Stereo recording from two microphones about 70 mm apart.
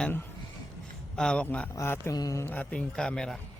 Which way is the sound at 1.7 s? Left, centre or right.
Left.